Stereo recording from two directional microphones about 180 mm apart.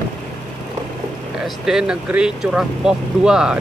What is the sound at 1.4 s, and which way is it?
Speech, 5° right (ahead or behind).